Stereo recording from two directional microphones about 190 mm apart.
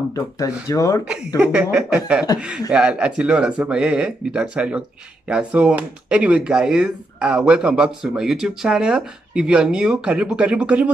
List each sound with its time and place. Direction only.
0.1 s speech: 20° left (ahead or behind)
1.4 s speech: 5° right (ahead or behind)